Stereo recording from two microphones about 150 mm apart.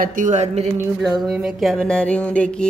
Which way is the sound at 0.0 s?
60° right (ahead or behind).